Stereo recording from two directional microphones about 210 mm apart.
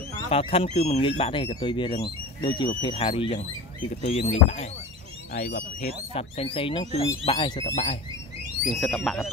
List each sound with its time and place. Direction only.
0.3 s speech: 25° left (ahead or behind)
5.3 s speech: 45° left (ahead or behind)
6.1 s speech: 25° left (ahead or behind)
8.6 s speech: centre (ahead or behind)